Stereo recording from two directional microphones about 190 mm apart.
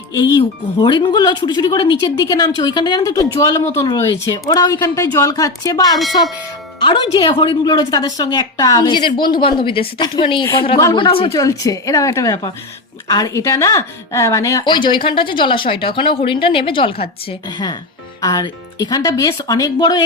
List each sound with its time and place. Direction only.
0.1 s speech: 20° left (ahead or behind)